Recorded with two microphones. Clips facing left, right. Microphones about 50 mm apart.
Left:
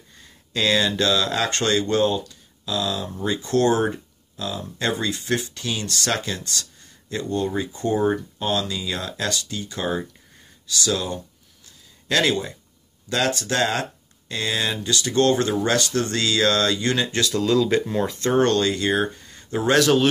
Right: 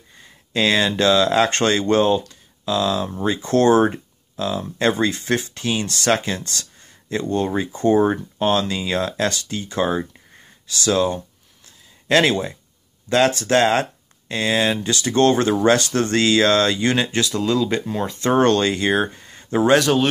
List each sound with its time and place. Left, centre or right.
0.5 s speech: right
4.9 s speech: right
5.5 s speech: right
14.8 s speech: right
17.4 s speech: centre
18.3 s speech: right
19.1 s a sound: right
19.8 s speech: centre